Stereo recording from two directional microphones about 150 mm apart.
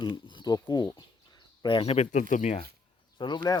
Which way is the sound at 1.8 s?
45° left (ahead or behind).